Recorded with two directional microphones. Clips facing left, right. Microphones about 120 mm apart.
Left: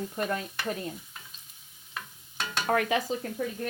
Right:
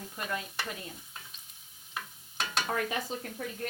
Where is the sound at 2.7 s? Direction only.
80° left.